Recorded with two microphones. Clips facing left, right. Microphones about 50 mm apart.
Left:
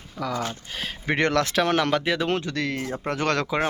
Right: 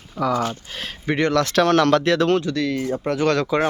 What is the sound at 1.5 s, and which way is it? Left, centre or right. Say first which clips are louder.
Speech: right 6 dB; centre.